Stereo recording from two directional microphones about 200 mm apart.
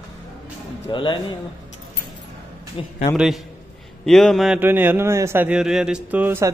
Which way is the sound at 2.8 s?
25° left (ahead or behind).